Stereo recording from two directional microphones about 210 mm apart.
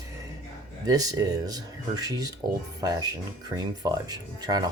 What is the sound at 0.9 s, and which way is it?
Speech, 15° right (ahead or behind).